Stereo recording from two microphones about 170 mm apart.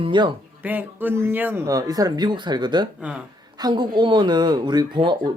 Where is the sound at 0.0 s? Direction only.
30° right (ahead or behind).